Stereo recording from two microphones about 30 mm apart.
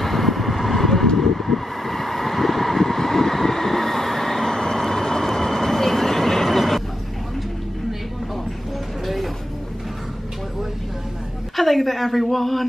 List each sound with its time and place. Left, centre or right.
0.0 s vehicle: centre
9.0 s vehicle: centre
11.5 s a sound: centre